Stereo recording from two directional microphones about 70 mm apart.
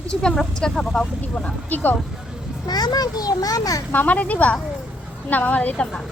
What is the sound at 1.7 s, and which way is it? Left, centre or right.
Speech, left.